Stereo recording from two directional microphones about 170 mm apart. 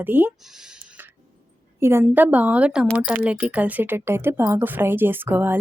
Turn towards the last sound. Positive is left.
turn(degrees=-10)  # may be behind; listen again after turning